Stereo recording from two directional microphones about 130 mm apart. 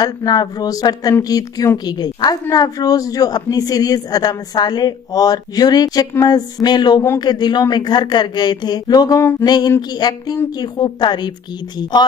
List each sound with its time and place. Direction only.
0.0 s a woman's voice: 30° left (ahead or behind)